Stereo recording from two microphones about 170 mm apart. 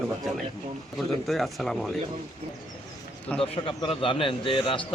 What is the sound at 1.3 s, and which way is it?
Speech, centre (ahead or behind).